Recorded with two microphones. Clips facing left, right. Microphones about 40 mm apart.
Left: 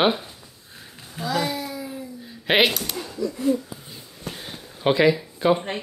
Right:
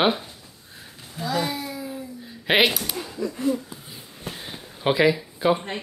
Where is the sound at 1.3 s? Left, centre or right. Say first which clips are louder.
Left 1 dB; centre.